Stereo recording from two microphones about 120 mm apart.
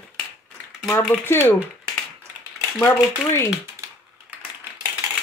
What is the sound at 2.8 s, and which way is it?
Speech, 20° left (ahead or behind).